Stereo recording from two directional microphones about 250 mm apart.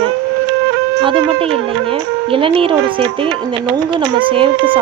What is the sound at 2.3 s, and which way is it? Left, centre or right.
Speech, right.